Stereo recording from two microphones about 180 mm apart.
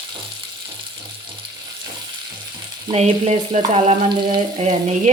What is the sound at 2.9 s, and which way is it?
Frying, 35° right (ahead or behind).